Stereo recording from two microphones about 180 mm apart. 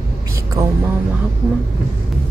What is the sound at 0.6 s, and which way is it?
Speech, 20° right (ahead or behind).